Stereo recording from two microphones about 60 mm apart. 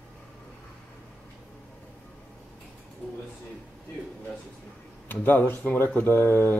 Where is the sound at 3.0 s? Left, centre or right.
Left.